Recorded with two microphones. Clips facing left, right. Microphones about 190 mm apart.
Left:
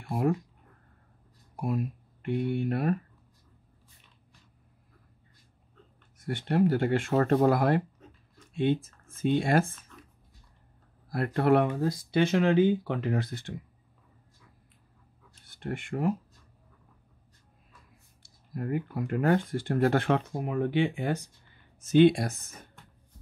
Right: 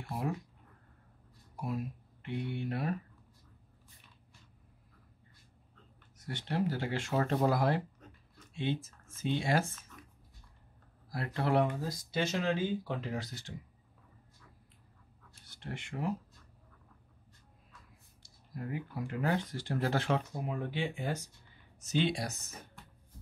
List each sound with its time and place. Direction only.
0.1 s speech: 55° left (ahead or behind)
2.2 s speech: 55° left (ahead or behind)
6.1 s speech: 55° left (ahead or behind)
11.1 s speech: 55° left (ahead or behind)
15.4 s speech: 55° left (ahead or behind)
18.2 s speech: 55° left (ahead or behind)